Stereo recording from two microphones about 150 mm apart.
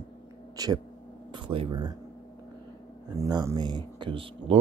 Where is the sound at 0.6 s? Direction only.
25° right (ahead or behind).